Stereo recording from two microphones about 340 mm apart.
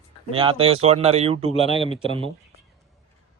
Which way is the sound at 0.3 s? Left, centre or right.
Centre.